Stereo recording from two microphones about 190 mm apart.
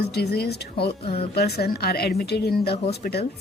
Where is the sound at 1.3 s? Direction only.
55° left (ahead or behind).